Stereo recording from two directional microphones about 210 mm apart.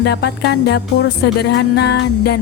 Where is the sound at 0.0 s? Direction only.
50° left (ahead or behind).